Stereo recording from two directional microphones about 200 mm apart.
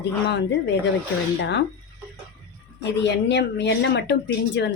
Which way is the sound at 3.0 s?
60° left (ahead or behind).